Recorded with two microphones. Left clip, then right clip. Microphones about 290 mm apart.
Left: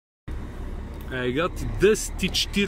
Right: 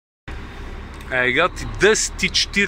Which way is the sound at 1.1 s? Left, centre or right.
Centre.